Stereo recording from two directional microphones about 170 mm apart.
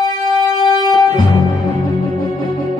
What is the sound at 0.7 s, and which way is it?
Music, 25° left (ahead or behind).